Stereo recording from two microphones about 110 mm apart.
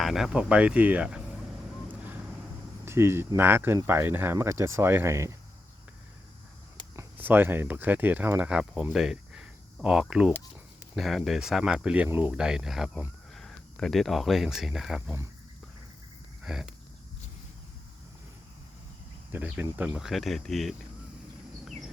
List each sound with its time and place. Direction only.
0.0 s speech: 5° right (ahead or behind)
2.8 s speech: 25° right (ahead or behind)
6.9 s speech: 20° right (ahead or behind)
16.4 s speech: 5° right (ahead or behind)
19.3 s speech: 15° right (ahead or behind); by 20.7 s centre (ahead or behind)